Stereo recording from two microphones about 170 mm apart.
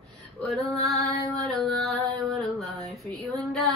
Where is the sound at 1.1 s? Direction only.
70° left (ahead or behind).